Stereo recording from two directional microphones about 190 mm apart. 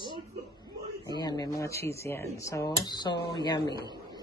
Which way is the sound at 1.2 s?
20° left (ahead or behind).